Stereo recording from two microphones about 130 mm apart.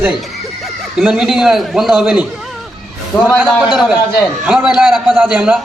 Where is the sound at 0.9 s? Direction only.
5° right (ahead or behind).